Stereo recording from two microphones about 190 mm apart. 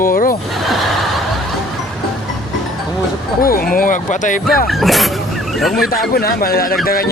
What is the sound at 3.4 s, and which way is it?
Speech, 50° left (ahead or behind).